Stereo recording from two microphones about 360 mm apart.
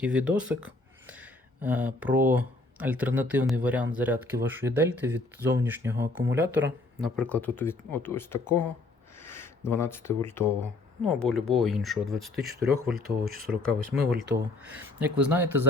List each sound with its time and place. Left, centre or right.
0.0 s speech: centre
6.4 s speech: right
7.0 s speech: centre
13.0 s speech: right
13.7 s speech: centre